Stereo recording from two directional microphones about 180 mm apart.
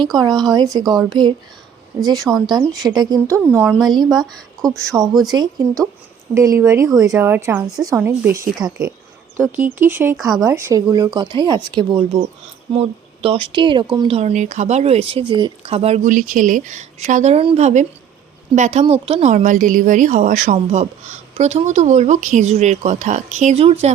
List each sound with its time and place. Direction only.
0.0 s a woman's voice: 20° right (ahead or behind); by 4.8 s centre (ahead or behind)
4.8 s a woman's voice: 15° right (ahead or behind)
9.6 s a woman's voice: 10° right (ahead or behind)
10.2 s speech: centre (ahead or behind)
10.4 s a woman's voice: 15° right (ahead or behind); by 16.1 s 35° right (ahead or behind)
16.1 s a woman's voice: 50° right (ahead or behind)